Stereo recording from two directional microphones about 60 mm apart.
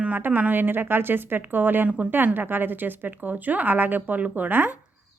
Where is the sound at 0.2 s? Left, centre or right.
Right.